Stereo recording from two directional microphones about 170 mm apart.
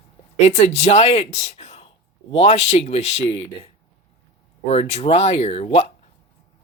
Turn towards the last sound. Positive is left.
turn(degrees=35)  # may be behind; listen again after turning